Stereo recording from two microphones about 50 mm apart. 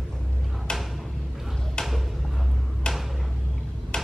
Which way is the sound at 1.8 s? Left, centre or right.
Centre.